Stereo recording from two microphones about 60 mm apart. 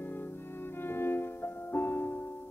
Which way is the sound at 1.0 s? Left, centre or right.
Left.